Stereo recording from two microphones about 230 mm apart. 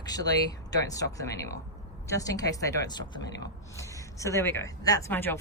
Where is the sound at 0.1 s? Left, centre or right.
Centre.